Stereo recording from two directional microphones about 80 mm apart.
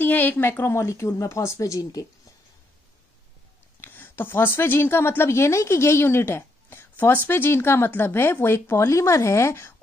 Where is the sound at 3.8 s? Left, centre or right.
Left.